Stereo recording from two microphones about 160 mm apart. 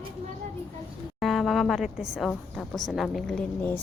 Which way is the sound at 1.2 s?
Centre (ahead or behind).